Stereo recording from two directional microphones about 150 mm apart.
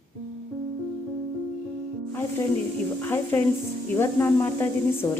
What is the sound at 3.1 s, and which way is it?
A woman's voice, 15° left (ahead or behind).